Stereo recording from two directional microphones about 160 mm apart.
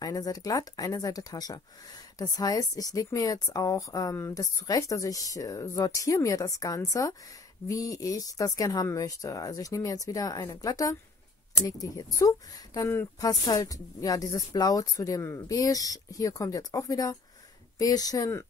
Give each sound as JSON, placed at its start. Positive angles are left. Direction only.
{"t": 0.0, "sound": "speech", "side_deg": 20}